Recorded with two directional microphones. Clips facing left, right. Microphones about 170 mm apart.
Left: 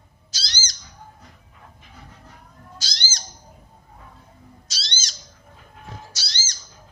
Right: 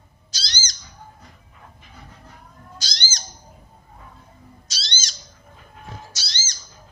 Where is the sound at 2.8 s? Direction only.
5° left (ahead or behind).